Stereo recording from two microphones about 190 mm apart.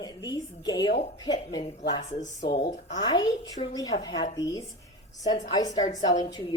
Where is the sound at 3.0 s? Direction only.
20° left (ahead or behind).